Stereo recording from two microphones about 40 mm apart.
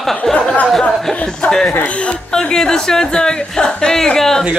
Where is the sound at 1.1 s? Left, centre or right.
Left.